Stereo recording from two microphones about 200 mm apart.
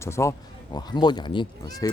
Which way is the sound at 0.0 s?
15° left (ahead or behind).